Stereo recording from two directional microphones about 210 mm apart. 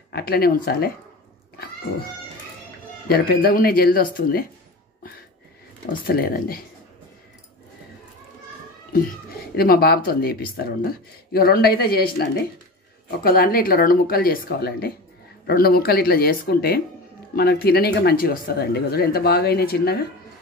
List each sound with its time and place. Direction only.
0.1 s speech: 45° left (ahead or behind)
3.1 s speech: 45° left (ahead or behind)
6.0 s speech: 45° left (ahead or behind)
8.9 s speech: 45° left (ahead or behind)